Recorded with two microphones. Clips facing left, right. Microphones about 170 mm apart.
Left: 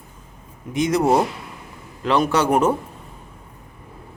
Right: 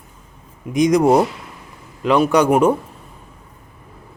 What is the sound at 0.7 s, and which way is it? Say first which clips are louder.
A man's voice: right 4 dB; 15° right (ahead or behind).